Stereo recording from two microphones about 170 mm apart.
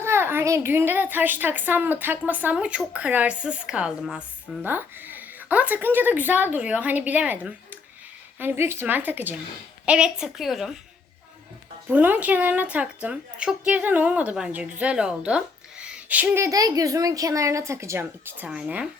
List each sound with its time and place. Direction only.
0.0 s a child's voice: 15° right (ahead or behind)
11.9 s a child's voice: 10° right (ahead or behind)